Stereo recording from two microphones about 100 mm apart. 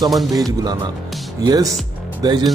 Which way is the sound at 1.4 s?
40° right (ahead or behind).